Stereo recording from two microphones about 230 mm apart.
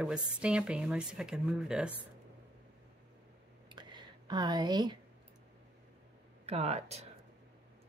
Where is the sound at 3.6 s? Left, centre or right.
Centre.